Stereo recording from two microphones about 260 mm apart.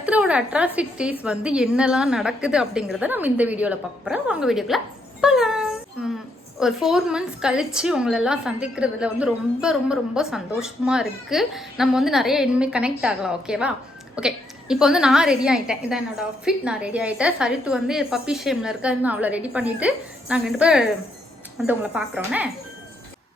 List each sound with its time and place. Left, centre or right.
0.0 s a woman's voice: centre
5.2 s a sound: centre
6.6 s a woman's voice: centre